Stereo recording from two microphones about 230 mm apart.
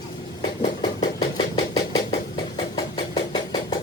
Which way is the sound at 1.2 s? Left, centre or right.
Left.